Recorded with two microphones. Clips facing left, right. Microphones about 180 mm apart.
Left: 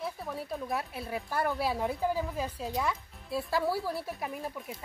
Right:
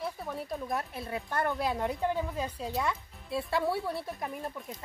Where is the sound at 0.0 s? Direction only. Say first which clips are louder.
Even; centre (ahead or behind).